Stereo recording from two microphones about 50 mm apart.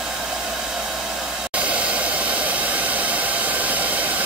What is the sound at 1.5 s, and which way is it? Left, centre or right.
Hair dryer, right.